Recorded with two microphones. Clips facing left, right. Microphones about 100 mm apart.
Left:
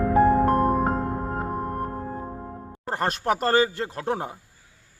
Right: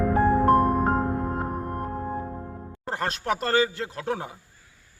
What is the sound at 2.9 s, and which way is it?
A man's voice, 40° left (ahead or behind).